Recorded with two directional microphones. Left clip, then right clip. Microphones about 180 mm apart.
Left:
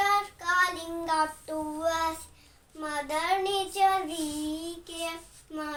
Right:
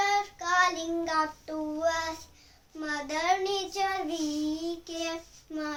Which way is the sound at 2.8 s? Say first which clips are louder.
Even; 15° right (ahead or behind).